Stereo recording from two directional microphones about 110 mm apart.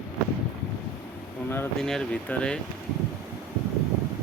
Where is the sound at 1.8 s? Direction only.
5° left (ahead or behind).